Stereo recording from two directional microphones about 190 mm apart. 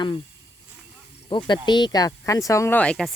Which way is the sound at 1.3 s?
25° left (ahead or behind).